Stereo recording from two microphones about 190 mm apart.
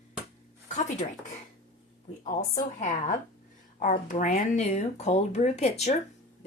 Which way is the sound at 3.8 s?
45° left (ahead or behind).